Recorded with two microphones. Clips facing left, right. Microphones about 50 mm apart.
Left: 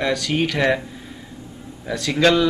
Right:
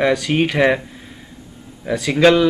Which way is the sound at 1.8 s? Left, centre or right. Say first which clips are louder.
Right 4 dB; centre.